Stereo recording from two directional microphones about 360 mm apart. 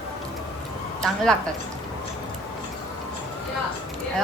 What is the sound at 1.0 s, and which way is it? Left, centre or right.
Speech, centre.